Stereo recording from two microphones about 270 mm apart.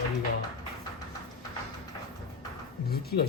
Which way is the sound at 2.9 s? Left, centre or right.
Left.